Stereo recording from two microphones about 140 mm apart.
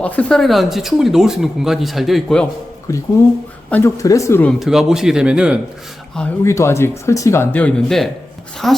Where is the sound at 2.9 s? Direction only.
20° left (ahead or behind).